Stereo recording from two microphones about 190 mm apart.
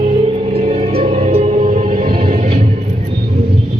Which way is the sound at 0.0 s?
30° right (ahead or behind).